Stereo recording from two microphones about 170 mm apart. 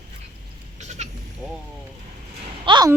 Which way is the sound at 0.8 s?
40° right (ahead or behind).